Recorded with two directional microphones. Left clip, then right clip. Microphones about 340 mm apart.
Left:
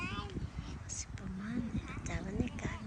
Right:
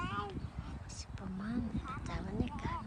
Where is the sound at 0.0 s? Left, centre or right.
Right.